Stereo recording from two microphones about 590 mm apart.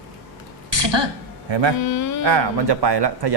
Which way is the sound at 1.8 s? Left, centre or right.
Left.